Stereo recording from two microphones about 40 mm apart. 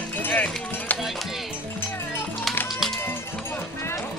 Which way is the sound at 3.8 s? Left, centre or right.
Left.